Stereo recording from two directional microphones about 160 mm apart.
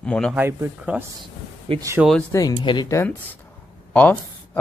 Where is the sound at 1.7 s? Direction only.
35° right (ahead or behind).